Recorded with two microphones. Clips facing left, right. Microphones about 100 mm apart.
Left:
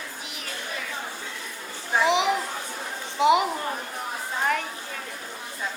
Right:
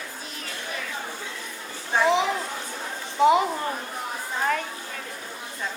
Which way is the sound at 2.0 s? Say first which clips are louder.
Right 1 dB; 15° left (ahead or behind).